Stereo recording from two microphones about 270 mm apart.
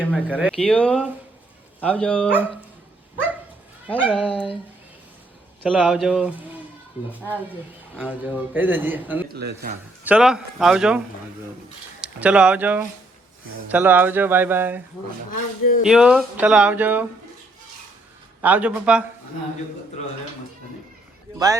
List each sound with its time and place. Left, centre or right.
0.0 s speech: centre
3.8 s speech: centre
5.6 s a man's voice: centre
9.3 s speech: right
10.0 s a man's voice: centre
15.9 s speech: centre
18.4 s speech: centre
21.3 s speech: centre